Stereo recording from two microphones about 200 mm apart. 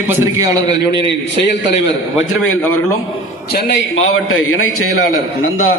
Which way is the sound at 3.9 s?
85° left.